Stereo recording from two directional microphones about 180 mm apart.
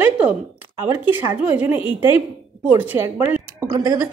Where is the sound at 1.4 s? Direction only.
10° right (ahead or behind).